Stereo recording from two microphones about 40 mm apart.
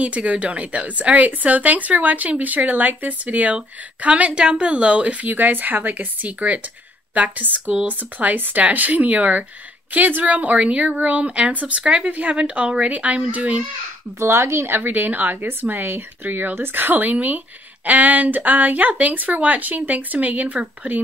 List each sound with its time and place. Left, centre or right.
0.0 s a woman's voice: right
3.5 s speech: right
5.2 s a woman's voice: right
14.2 s speech: right
14.8 s speech: right